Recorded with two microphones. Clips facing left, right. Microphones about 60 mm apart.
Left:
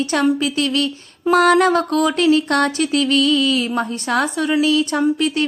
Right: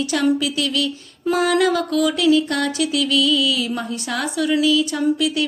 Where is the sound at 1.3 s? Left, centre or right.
Left.